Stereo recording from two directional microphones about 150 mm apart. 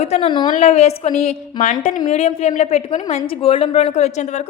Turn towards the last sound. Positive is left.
turn(degrees=50)  # may be behind; listen again after turning